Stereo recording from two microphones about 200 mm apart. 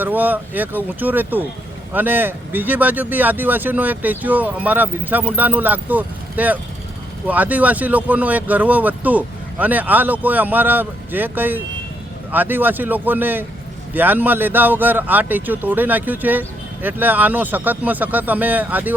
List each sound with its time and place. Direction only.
0.0 s a man's voice: 10° right (ahead or behind)